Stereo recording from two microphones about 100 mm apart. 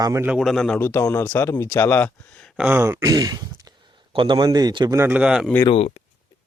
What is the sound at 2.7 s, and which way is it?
Speech, 20° right (ahead or behind).